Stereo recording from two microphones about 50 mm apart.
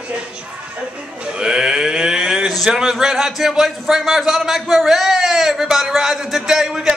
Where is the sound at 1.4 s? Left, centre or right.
Centre.